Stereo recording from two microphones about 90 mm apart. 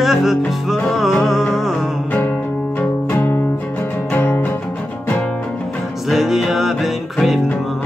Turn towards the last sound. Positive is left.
turn(degrees=0)  # may be behind; listen again after turning